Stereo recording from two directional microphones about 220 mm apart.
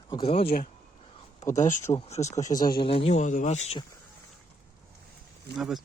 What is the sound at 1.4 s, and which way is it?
Speech, 35° left (ahead or behind).